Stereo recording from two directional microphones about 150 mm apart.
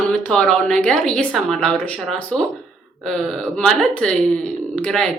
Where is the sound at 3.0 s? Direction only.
5° left (ahead or behind).